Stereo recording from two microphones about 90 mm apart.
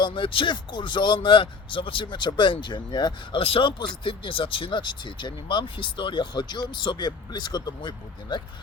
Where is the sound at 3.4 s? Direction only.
85° left; by 8.4 s 55° left (ahead or behind).